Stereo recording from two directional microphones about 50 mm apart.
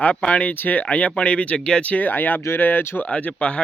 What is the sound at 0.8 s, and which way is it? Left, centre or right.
Speech, left.